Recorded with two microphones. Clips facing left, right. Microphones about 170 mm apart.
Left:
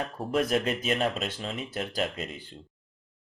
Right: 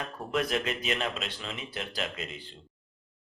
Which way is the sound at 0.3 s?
40° left (ahead or behind).